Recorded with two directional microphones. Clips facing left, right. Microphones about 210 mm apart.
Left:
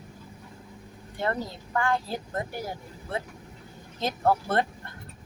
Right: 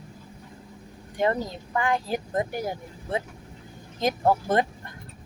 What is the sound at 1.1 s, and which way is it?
Speech, 15° right (ahead or behind).